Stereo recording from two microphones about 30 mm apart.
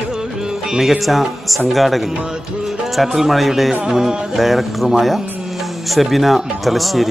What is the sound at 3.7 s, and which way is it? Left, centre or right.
Speech, centre.